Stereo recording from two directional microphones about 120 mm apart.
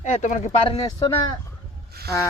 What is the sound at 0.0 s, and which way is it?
Speech, 90° left.